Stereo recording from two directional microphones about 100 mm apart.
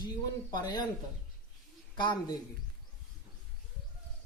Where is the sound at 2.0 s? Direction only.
45° left (ahead or behind).